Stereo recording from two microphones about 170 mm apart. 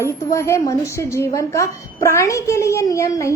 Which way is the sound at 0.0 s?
15° left (ahead or behind).